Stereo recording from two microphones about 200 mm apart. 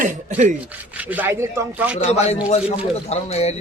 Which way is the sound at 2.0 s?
35° left (ahead or behind).